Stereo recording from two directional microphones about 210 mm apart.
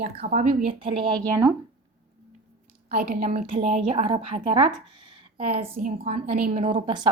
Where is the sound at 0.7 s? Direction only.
25° right (ahead or behind).